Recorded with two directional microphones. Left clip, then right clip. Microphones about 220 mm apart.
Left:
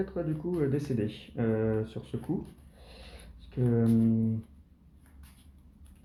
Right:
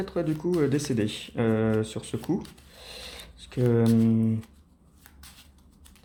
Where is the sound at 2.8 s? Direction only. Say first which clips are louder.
Right 11 dB; 45° right (ahead or behind).